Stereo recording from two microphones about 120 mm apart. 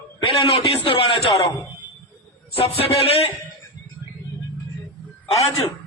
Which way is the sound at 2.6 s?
50° left (ahead or behind).